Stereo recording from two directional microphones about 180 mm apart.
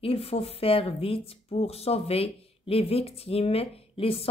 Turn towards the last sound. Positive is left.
turn(degrees=30)  # may be behind; listen again after turning